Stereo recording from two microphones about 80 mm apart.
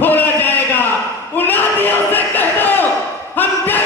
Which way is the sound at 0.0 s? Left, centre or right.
Left.